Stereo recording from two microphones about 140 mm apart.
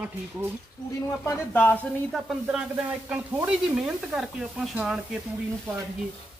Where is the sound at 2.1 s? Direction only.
5° right (ahead or behind).